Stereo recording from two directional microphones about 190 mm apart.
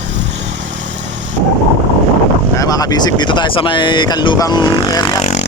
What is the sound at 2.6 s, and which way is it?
Speech, 20° left (ahead or behind).